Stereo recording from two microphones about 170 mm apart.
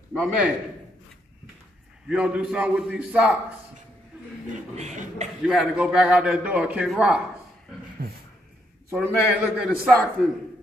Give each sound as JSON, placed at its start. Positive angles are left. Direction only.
{"t": 0.1, "sound": "a man's voice", "side_deg": -5}
{"t": 2.0, "sound": "a man's voice", "side_deg": -5}
{"t": 4.7, "sound": "speech", "side_deg": -40}
{"t": 5.4, "sound": "a man's voice", "side_deg": -5}
{"t": 8.0, "sound": "dog", "side_deg": -60}
{"t": 8.9, "sound": "a man's voice", "side_deg": -5}